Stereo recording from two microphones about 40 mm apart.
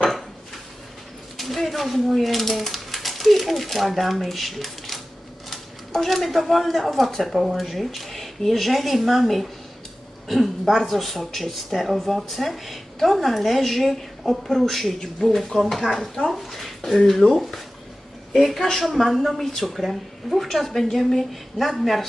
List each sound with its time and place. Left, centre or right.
1.4 s speech: centre
15.6 s speech: centre
15.9 s speech: centre
16.3 s speech: centre